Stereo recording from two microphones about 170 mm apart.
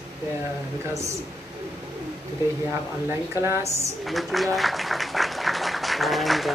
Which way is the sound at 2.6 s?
15° right (ahead or behind).